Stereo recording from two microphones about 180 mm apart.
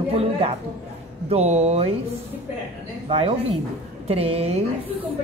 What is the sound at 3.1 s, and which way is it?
A woman's voice, 30° right (ahead or behind).